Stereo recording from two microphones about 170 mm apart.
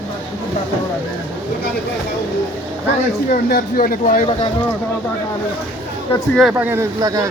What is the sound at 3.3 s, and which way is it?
Speech, 60° left (ahead or behind).